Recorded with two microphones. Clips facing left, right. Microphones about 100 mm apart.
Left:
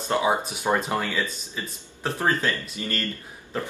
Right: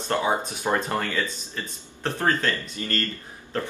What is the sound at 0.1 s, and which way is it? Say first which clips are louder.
A man's voice: left 1 dB; 15° left (ahead or behind).